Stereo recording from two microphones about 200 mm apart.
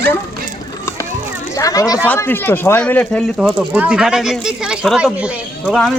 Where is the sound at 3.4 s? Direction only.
5° right (ahead or behind).